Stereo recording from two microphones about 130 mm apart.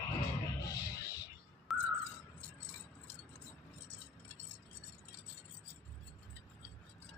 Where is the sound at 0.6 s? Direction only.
30° left (ahead or behind).